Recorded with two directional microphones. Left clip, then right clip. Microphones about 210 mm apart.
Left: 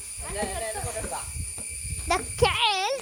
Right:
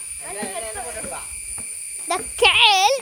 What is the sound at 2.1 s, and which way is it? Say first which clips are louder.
Speech: right 1 dB; 5° left (ahead or behind).